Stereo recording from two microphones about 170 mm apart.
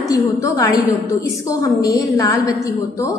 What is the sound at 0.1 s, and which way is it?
A woman's voice, 20° left (ahead or behind).